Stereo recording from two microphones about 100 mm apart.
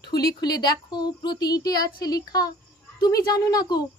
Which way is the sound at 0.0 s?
45° left (ahead or behind).